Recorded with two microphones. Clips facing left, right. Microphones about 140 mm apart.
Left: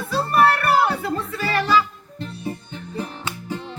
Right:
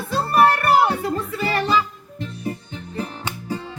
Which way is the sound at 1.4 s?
30° right (ahead or behind).